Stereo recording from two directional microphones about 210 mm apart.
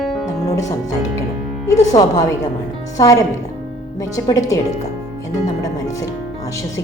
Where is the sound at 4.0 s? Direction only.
15° left (ahead or behind).